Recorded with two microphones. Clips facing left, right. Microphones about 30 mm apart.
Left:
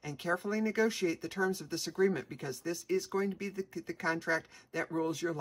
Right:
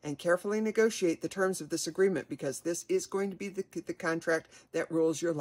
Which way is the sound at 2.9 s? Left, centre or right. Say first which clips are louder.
Right 1 dB; left.